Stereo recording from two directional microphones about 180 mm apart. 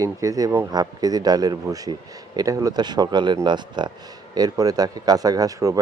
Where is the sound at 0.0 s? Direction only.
20° right (ahead or behind).